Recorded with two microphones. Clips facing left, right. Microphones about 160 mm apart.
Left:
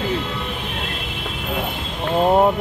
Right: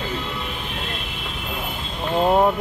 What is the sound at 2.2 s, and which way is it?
Speech, 15° left (ahead or behind).